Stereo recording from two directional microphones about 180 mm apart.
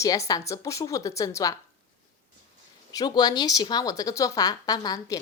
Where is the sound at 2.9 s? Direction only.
20° left (ahead or behind).